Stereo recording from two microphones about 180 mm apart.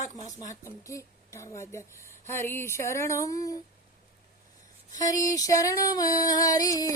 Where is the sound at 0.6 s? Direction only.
15° left (ahead or behind).